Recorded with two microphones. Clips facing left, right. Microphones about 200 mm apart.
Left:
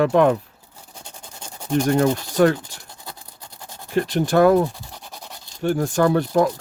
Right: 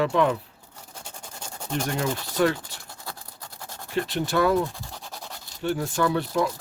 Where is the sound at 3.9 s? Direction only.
45° left (ahead or behind).